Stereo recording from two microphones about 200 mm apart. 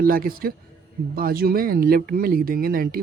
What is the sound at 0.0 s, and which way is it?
Speech, 45° right (ahead or behind).